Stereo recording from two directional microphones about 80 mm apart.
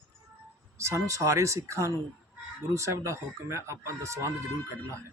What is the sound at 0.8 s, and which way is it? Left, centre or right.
Speech, right.